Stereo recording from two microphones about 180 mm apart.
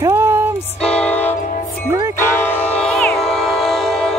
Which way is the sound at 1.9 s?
15° right (ahead or behind).